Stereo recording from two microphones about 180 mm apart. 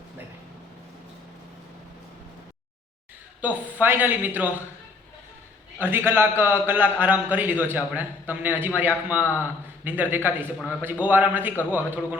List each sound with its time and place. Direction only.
3.4 s a man's voice: 10° right (ahead or behind)
6.1 s a man's voice: 10° right (ahead or behind)